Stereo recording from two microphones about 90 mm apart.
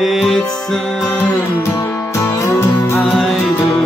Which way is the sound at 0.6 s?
Centre (ahead or behind).